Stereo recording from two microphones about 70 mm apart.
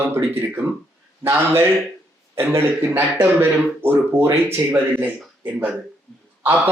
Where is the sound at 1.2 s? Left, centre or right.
Right.